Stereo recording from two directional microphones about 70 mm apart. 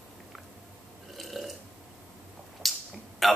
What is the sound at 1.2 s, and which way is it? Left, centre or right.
Burping, centre.